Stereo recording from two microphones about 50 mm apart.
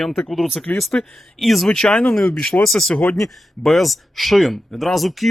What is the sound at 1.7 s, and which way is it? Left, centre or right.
Speech, centre.